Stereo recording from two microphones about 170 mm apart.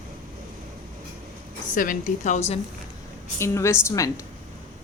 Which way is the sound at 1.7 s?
50° left (ahead or behind).